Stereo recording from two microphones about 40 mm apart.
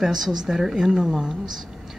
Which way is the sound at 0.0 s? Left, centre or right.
Centre.